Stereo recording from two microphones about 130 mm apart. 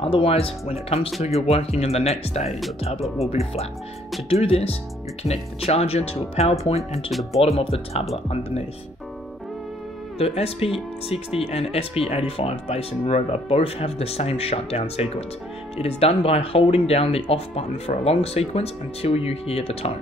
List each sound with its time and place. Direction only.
0.0 s speech: 45° left (ahead or behind)
7.1 s speech: centre (ahead or behind)
7.4 s speech: 50° left (ahead or behind)
10.1 s speech: 50° left (ahead or behind)